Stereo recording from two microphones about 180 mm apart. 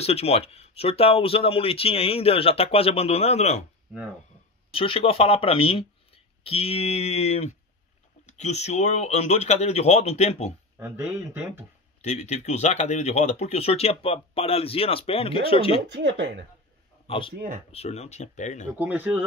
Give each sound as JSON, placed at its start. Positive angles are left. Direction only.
{"t": 0.0, "sound": "speech", "side_deg": 35}
{"t": 4.7, "sound": "speech", "side_deg": 30}
{"t": 10.8, "sound": "speech", "side_deg": -10}
{"t": 12.0, "sound": "speech", "side_deg": 40}
{"t": 15.9, "sound": "speech", "side_deg": -85}
{"t": 17.1, "sound": "speech", "side_deg": 30}
{"t": 18.7, "sound": "speech", "side_deg": -10}